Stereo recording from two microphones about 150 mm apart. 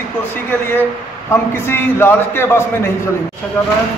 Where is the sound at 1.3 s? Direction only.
15° left (ahead or behind).